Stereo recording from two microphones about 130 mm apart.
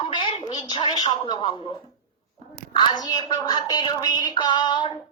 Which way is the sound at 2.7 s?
30° left (ahead or behind).